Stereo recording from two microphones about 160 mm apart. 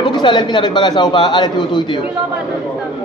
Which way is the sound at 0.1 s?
30° left (ahead or behind).